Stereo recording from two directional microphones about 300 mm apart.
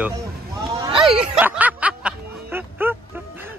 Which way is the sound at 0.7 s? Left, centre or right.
Centre.